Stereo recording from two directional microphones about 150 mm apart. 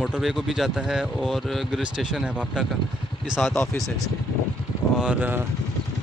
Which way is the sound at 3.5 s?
15° left (ahead or behind).